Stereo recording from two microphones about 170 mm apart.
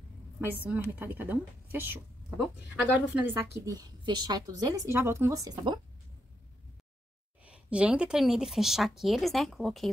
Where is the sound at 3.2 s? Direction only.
15° right (ahead or behind).